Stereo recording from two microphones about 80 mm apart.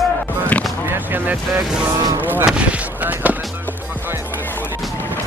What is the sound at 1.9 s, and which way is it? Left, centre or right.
Speech, right.